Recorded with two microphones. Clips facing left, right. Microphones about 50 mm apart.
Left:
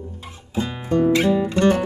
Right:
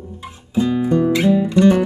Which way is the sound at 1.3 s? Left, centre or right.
Left.